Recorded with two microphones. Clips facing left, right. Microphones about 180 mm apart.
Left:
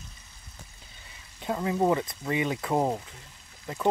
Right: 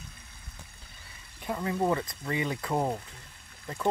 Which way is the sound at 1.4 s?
20° left (ahead or behind).